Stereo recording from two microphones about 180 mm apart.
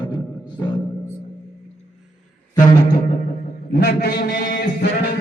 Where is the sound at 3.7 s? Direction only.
60° left (ahead or behind).